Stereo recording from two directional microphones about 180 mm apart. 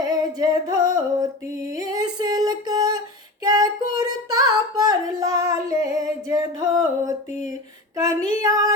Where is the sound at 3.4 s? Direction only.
20° right (ahead or behind).